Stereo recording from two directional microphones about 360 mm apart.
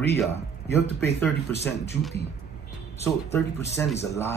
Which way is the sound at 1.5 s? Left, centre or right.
Left.